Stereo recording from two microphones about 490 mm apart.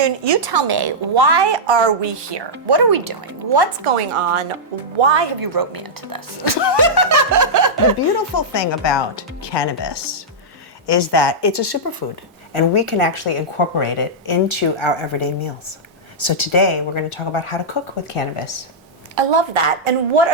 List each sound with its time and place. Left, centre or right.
0.0 s a woman's voice: right
3.8 s a woman's voice: right
4.9 s speech: right
5.4 s a woman's voice: right
7.1 s snicker: right
8.4 s speech: left
12.7 s speech: left
14.3 s speech: left
19.1 s a woman's voice: right